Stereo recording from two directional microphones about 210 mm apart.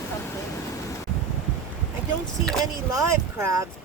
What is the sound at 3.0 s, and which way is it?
Speech, 15° right (ahead or behind).